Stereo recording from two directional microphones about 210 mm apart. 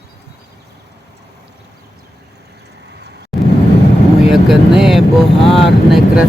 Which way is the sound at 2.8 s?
55° right (ahead or behind).